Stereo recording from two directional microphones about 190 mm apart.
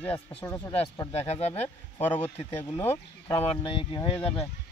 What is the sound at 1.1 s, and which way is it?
Speech, 35° left (ahead or behind).